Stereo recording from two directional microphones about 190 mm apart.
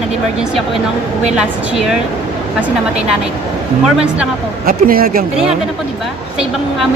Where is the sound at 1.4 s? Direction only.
5° right (ahead or behind).